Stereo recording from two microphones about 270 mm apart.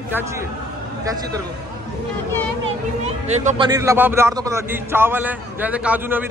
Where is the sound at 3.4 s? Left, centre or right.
Right.